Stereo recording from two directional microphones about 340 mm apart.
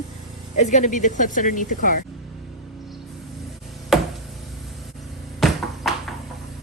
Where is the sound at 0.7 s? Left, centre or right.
Left.